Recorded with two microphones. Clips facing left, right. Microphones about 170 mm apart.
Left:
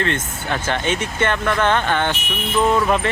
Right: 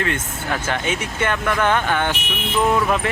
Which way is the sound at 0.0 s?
5° right (ahead or behind).